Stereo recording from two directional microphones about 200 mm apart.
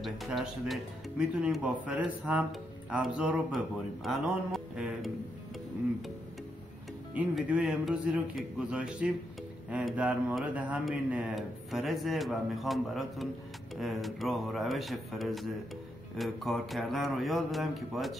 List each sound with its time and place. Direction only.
0.0 s speech: centre (ahead or behind)
7.2 s speech: 5° right (ahead or behind)